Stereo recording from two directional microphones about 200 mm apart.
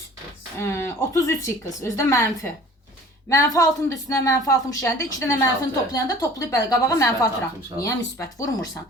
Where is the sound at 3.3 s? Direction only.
15° left (ahead or behind).